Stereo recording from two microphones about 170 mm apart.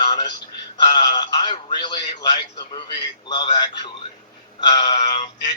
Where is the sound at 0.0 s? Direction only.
25° left (ahead or behind).